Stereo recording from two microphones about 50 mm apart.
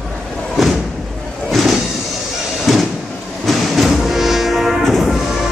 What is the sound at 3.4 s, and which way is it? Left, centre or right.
Train, centre.